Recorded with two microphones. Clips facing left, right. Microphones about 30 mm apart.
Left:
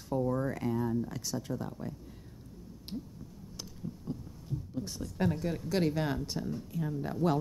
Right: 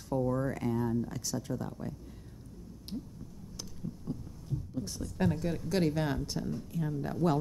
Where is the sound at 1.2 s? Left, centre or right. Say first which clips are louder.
Even; centre.